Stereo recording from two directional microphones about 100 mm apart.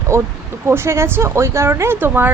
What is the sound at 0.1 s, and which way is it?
A woman's voice, 25° right (ahead or behind).